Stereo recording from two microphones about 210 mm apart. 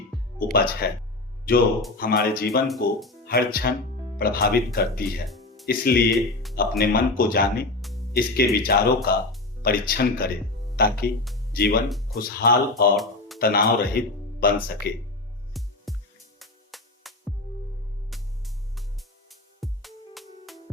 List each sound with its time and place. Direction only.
0.3 s speech: 45° left (ahead or behind)
2.0 s speech: 45° left (ahead or behind)
6.1 s speech: centre (ahead or behind)
6.6 s speech: 45° left (ahead or behind)
13.0 s a sound: centre (ahead or behind)
13.4 s speech: 45° left (ahead or behind)
15.6 s music: centre (ahead or behind)